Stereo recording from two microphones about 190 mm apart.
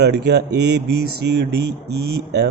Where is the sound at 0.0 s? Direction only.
65° right (ahead or behind).